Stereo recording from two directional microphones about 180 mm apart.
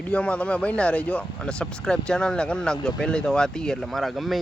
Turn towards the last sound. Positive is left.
turn(degrees=0)  # may be behind; listen again after turning